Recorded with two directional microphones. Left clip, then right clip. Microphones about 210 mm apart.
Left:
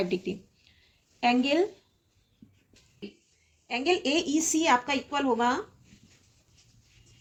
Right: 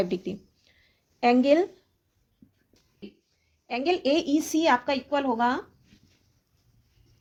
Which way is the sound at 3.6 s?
50° right (ahead or behind).